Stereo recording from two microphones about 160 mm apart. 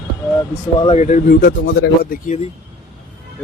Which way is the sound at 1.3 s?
65° left (ahead or behind).